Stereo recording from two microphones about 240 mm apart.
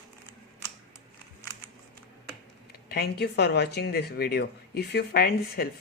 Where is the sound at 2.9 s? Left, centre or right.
Left.